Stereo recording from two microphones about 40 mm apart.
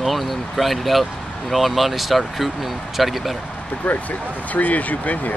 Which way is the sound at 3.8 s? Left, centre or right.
Left.